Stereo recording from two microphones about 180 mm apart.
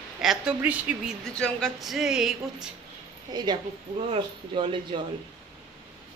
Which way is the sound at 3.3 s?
25° right (ahead or behind).